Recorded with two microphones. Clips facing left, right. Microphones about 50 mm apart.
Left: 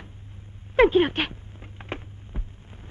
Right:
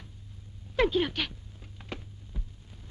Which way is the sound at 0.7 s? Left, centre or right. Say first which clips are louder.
Left 8 dB; left.